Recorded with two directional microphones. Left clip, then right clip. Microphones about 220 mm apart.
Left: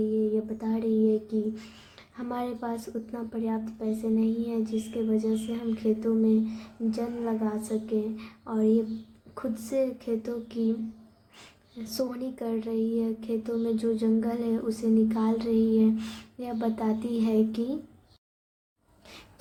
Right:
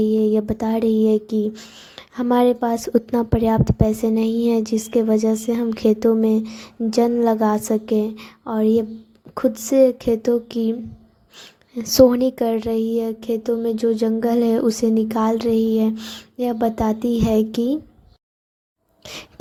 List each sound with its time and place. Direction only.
0.4 s speech: 40° right (ahead or behind)
11.8 s speech: 40° right (ahead or behind)
19.0 s a sound: 40° right (ahead or behind)